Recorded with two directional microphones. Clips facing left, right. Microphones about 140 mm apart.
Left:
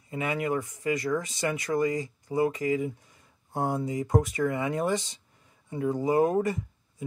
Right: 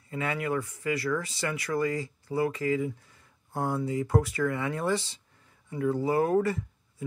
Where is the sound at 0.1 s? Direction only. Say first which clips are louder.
Left 1 dB; 20° left (ahead or behind).